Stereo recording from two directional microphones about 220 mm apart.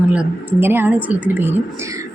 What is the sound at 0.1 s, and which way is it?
Speech, 10° right (ahead or behind).